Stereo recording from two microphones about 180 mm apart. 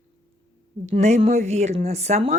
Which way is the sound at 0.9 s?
40° right (ahead or behind).